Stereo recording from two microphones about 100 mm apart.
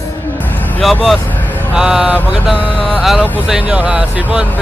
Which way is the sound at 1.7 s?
10° right (ahead or behind).